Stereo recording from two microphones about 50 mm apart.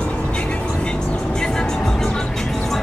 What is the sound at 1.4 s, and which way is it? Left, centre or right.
Music, centre.